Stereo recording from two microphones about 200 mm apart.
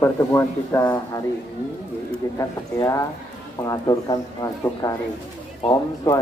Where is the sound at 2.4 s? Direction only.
15° left (ahead or behind).